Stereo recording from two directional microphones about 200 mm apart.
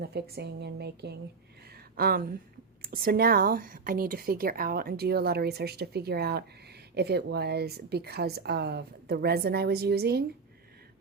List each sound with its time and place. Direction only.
0.0 s a woman's voice: 55° right (ahead or behind)
1.7 s a sound: 50° right (ahead or behind)
2.8 s speech: 45° right (ahead or behind)